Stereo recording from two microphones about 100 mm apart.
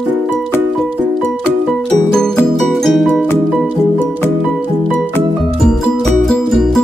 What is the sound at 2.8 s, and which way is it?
Music, 5° left (ahead or behind).